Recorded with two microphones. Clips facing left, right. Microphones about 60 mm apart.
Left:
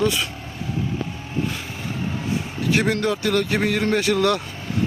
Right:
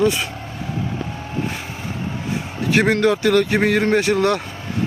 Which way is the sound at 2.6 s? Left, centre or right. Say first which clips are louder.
Right 5 dB; right.